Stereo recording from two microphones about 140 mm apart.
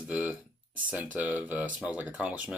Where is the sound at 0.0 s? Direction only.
10° right (ahead or behind).